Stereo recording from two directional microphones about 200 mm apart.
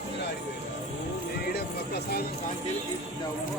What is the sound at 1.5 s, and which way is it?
Music, 50° left (ahead or behind).